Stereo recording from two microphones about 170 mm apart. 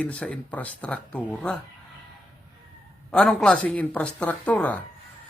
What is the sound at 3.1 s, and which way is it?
Speech, 5° left (ahead or behind).